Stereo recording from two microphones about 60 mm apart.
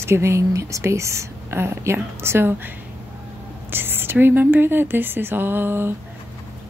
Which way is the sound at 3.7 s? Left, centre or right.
Right.